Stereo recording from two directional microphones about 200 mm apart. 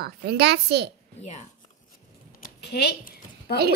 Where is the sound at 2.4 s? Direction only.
55° left (ahead or behind).